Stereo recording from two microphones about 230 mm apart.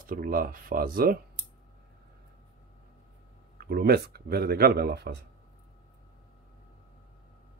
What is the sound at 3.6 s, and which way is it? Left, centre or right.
Speech, right.